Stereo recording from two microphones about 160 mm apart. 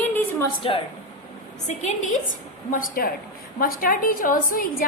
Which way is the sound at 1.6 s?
45° left (ahead or behind).